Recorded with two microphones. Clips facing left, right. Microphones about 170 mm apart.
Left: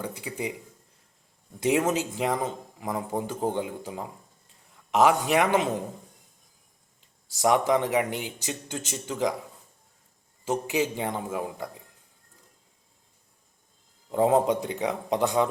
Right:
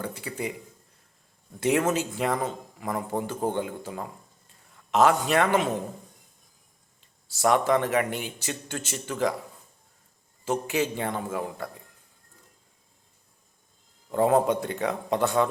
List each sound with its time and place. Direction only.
0.0 s speech: 15° left (ahead or behind)
1.5 s speech: 15° left (ahead or behind)
7.0 s speech: 15° left (ahead or behind)
10.4 s speech: 15° left (ahead or behind)
14.1 s speech: 15° left (ahead or behind)